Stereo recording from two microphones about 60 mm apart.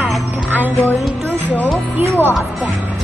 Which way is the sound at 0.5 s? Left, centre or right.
Right.